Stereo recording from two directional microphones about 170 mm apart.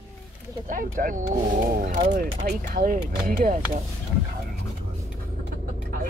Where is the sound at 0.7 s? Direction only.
55° right (ahead or behind).